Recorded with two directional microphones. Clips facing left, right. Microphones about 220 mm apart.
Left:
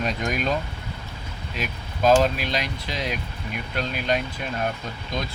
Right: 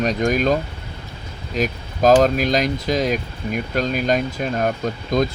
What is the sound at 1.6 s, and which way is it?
Speech, 40° right (ahead or behind).